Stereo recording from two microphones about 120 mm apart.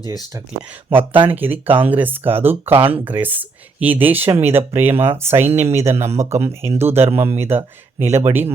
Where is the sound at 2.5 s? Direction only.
55° right (ahead or behind).